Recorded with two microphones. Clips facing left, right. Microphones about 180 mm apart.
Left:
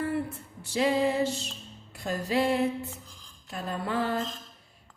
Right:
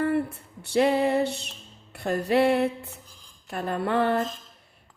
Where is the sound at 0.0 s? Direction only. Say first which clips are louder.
Right 5 dB; 60° right (ahead or behind).